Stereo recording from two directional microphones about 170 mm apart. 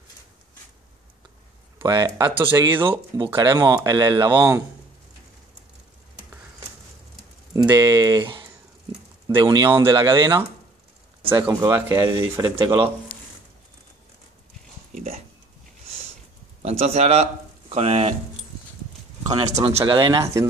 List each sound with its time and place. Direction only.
1.8 s speech: 20° right (ahead or behind)
2.5 s speech: 15° right (ahead or behind)
2.8 s speech: 30° right (ahead or behind)
7.5 s speech: 20° right (ahead or behind)
16.6 s speech: 40° right (ahead or behind)
19.2 s speech: 30° right (ahead or behind)